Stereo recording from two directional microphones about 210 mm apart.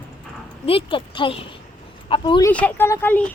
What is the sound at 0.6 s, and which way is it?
Speech, 25° left (ahead or behind).